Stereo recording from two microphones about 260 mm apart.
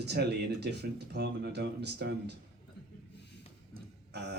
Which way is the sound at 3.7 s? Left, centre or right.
Right.